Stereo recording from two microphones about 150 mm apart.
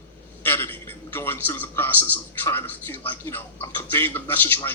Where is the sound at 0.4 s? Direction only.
15° left (ahead or behind).